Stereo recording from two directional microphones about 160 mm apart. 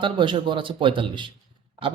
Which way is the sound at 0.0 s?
30° right (ahead or behind).